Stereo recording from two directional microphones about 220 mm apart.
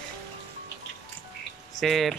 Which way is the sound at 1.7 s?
Centre (ahead or behind).